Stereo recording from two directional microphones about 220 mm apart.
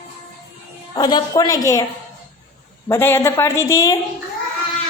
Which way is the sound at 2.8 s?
10° left (ahead or behind).